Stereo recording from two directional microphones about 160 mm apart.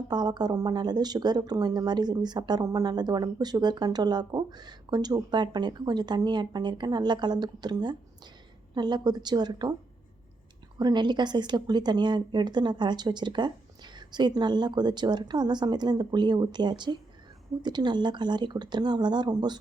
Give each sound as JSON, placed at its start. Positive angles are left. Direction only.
{"t": 0.1, "sound": "speech", "side_deg": -25}
{"t": 10.8, "sound": "speech", "side_deg": -25}